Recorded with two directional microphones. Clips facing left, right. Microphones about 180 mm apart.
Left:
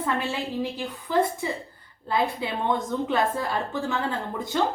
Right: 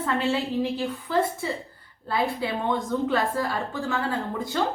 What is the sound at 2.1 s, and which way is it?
A woman's voice, 20° left (ahead or behind).